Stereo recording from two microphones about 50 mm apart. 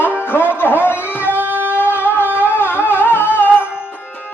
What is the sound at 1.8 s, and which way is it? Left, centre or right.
Music, left.